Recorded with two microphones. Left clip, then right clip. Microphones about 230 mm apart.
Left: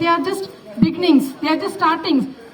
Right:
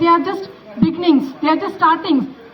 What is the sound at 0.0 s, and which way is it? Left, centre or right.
A woman's voice, left.